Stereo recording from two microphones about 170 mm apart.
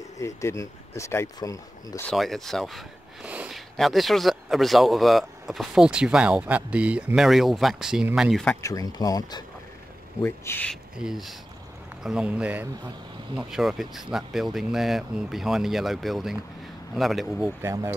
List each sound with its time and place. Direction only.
0.2 s speech: 15° left (ahead or behind)
2.0 s speech: centre (ahead or behind)
8.5 s speech: 20° left (ahead or behind)
11.0 s speech: centre (ahead or behind)
17.6 s speech: 15° right (ahead or behind)